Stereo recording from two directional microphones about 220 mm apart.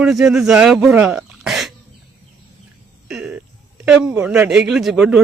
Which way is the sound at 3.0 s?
5° right (ahead or behind).